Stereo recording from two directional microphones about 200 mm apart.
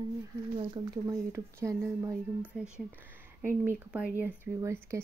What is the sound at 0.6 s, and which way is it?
Speech, 15° right (ahead or behind).